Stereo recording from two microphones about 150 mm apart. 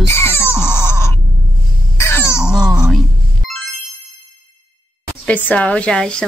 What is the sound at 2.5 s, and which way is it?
Speech, 5° right (ahead or behind).